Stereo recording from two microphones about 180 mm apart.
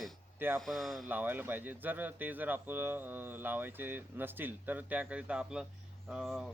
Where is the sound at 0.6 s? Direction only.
Centre (ahead or behind).